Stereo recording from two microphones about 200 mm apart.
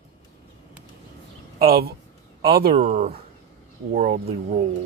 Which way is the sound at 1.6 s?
50° right (ahead or behind).